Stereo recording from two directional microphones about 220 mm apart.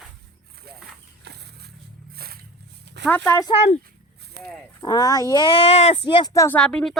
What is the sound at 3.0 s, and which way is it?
Speech, 10° left (ahead or behind).